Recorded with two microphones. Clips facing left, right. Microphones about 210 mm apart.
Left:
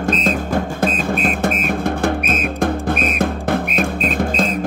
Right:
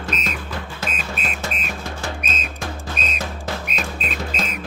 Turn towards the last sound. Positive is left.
turn(degrees=50)  # may be behind; listen again after turning